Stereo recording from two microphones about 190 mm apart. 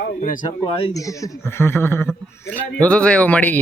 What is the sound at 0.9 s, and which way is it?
A man's voice, 15° left (ahead or behind).